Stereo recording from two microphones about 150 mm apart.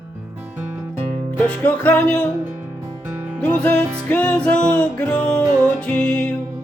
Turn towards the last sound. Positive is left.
turn(degrees=5)  # may be behind; listen again after turning